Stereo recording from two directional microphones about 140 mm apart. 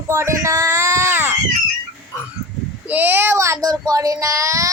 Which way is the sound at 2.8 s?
10° right (ahead or behind).